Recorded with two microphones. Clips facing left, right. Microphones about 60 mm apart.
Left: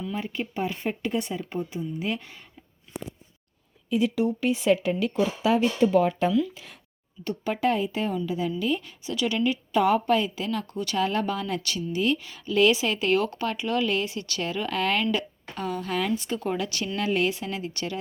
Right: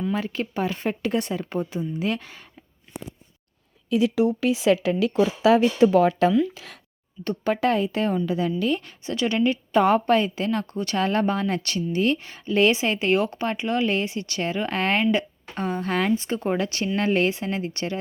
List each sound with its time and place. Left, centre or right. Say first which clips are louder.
0.1 s speech: right 4 dB; right
3.8 s speech: right 3 dB; right
6.5 s speech: right 3 dB; right
7.3 s a woman's voice: right 3 dB; right
16.1 s a woman's voice: right 4 dB; right